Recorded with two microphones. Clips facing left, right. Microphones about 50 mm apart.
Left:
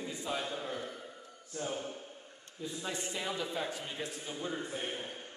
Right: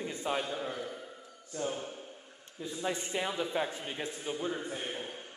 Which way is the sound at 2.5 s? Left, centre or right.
Centre.